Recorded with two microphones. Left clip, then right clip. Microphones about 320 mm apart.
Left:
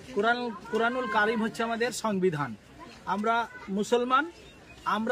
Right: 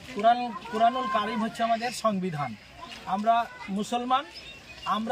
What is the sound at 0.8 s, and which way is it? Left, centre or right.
A man's voice, centre.